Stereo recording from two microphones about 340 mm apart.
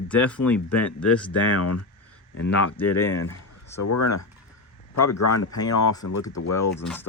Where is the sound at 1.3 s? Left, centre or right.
Left.